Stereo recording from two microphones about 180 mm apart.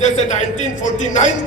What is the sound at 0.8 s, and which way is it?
Speech, 40° left (ahead or behind).